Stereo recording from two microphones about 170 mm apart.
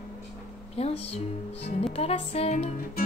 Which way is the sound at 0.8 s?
35° left (ahead or behind).